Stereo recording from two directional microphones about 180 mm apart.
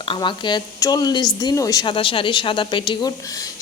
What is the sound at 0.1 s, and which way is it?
A woman's voice, 25° left (ahead or behind).